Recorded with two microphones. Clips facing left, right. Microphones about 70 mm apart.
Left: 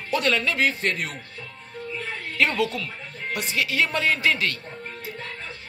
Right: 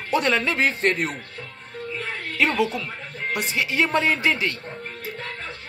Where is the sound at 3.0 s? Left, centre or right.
Right.